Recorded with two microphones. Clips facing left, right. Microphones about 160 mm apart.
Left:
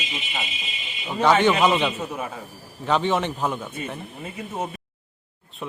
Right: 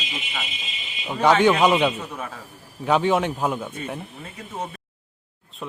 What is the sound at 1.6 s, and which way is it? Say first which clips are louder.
A man's voice: right 2 dB; 10° right (ahead or behind).